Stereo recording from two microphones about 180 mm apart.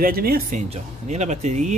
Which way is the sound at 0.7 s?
40° right (ahead or behind).